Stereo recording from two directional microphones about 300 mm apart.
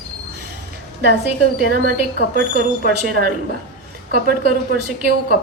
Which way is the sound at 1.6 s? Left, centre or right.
Right.